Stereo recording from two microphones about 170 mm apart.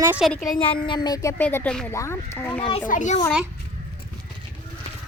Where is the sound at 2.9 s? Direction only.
45° left (ahead or behind).